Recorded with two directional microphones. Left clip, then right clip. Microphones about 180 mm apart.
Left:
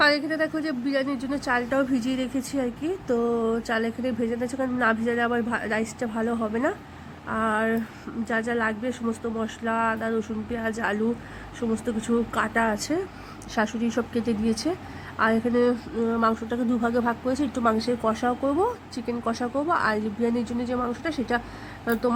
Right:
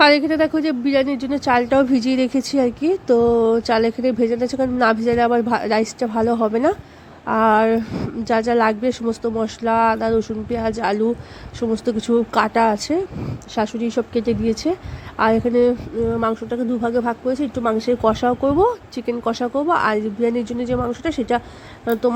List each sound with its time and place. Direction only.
0.0 s a woman's voice: 30° right (ahead or behind)